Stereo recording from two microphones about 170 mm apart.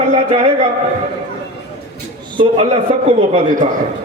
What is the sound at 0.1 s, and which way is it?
Speech, 40° right (ahead or behind).